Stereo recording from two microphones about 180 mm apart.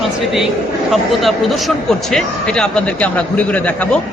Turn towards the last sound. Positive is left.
turn(degrees=10)  # may be behind; listen again after turning